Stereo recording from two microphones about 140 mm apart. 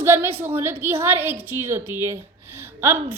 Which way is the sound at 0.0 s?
15° right (ahead or behind).